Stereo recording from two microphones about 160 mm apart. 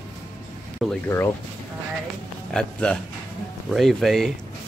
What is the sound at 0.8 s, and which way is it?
Speech, centre (ahead or behind).